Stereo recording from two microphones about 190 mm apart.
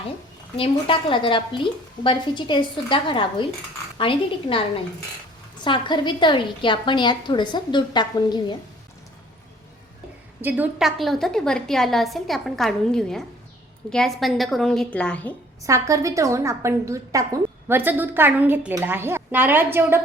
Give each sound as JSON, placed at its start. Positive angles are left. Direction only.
{"t": 0.5, "sound": "a woman's voice", "side_deg": 30}
{"t": 5.6, "sound": "a woman's voice", "side_deg": 25}
{"t": 10.4, "sound": "a woman's voice", "side_deg": -5}
{"t": 15.6, "sound": "a woman's voice", "side_deg": -15}